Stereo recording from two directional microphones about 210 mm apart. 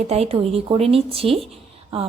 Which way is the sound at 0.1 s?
30° right (ahead or behind).